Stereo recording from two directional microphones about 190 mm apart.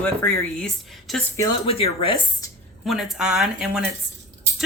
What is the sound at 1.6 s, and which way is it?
Speech, 30° left (ahead or behind).